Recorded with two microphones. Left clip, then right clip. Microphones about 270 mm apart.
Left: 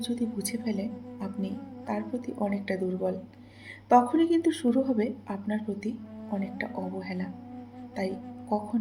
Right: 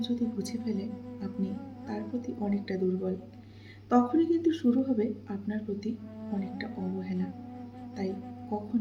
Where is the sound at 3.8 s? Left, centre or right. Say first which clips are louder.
Left 4 dB; left.